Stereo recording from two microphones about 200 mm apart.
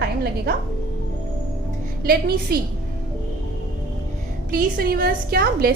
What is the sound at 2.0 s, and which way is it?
Speech, 50° right (ahead or behind).